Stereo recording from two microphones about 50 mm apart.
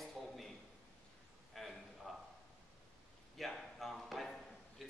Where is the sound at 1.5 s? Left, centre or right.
Centre.